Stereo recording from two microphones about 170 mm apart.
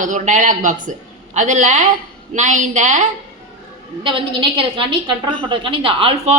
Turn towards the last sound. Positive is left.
turn(degrees=-30)  # may be behind; listen again after turning